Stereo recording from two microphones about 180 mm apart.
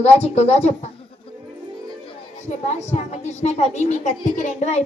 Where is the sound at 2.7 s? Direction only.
40° left (ahead or behind).